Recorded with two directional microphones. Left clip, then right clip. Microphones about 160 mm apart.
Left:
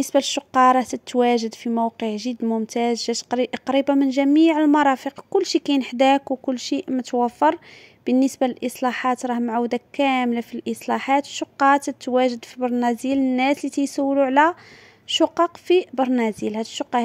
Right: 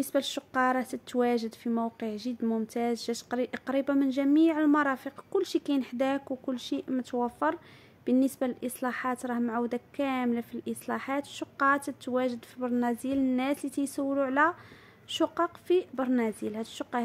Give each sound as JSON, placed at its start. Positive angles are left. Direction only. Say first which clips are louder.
{"t": 0.0, "sound": "speech", "louder": "left 10 dB", "side_deg": 40}